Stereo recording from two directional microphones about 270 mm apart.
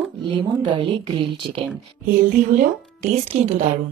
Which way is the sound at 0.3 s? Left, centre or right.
Centre.